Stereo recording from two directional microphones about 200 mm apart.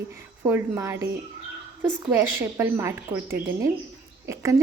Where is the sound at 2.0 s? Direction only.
10° right (ahead or behind).